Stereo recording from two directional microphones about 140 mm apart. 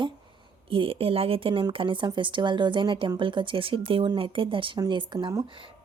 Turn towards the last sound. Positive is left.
turn(degrees=-30)  # may be behind; listen again after turning